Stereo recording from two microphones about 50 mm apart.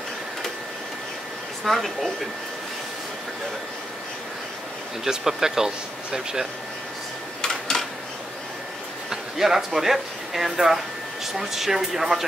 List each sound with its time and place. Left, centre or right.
1.6 s speech: centre
5.0 s speech: centre
7.4 s a sound: centre
9.1 s speech: centre